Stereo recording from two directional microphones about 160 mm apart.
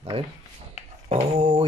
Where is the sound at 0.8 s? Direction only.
45° left (ahead or behind).